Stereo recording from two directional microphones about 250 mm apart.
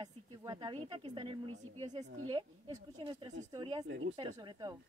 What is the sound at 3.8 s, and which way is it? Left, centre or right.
Speech, right.